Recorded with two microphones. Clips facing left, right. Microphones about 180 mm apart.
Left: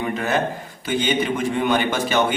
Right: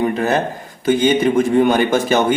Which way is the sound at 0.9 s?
45° right (ahead or behind).